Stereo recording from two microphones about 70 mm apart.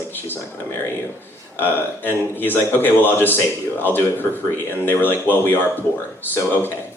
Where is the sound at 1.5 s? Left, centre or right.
Left.